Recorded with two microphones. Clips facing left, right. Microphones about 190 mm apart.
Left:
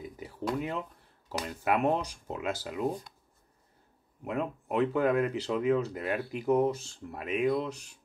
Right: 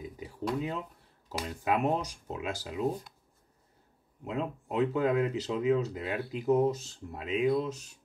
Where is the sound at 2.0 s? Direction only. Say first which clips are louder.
Left 2 dB; 20° right (ahead or behind).